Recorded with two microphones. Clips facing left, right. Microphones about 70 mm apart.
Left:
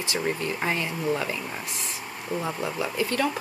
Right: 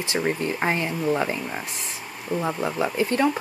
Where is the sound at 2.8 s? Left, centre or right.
Right.